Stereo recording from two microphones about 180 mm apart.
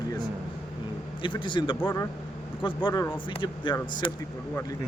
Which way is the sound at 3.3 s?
25° left (ahead or behind).